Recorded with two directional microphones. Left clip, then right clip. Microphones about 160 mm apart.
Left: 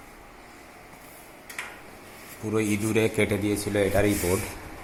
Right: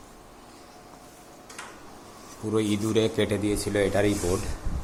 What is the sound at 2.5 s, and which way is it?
Speech, 10° left (ahead or behind).